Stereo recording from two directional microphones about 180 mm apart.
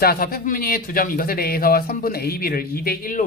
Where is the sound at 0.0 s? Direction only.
55° left (ahead or behind).